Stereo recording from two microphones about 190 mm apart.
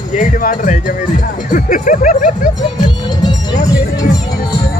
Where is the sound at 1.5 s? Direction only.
45° left (ahead or behind).